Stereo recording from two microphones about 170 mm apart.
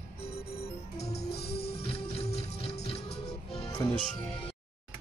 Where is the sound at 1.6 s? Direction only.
35° left (ahead or behind).